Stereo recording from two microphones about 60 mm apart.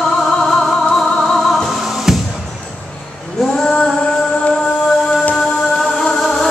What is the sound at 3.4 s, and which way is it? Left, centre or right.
Female singing, centre.